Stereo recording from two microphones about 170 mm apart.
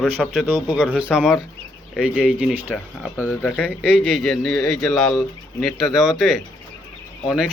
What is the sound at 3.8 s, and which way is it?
Speech, 5° right (ahead or behind).